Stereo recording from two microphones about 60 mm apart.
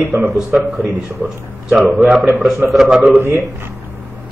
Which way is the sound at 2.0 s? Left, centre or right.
Centre.